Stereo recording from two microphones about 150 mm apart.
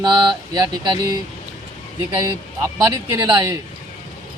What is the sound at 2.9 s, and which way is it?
Speech, 25° right (ahead or behind).